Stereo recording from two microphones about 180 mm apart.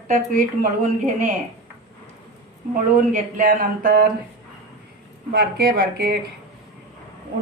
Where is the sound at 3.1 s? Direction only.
45° right (ahead or behind).